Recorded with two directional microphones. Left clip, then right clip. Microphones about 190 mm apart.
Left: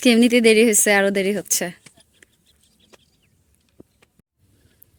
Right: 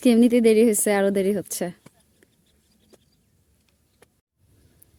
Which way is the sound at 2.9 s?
70° right (ahead or behind).